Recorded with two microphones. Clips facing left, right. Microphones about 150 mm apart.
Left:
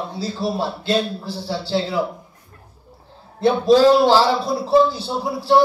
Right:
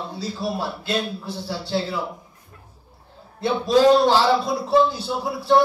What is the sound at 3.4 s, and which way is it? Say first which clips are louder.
A man's voice: left 4 dB; 25° left (ahead or behind).